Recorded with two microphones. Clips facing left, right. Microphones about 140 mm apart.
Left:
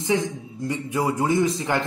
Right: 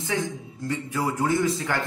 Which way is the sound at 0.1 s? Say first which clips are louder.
Left 4 dB; 20° left (ahead or behind).